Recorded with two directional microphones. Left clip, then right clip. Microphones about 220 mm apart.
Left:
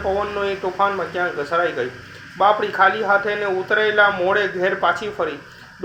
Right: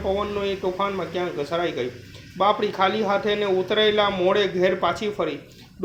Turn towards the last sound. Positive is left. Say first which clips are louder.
# left 4 dB
turn(degrees=-50)  # may be behind; listen again after turning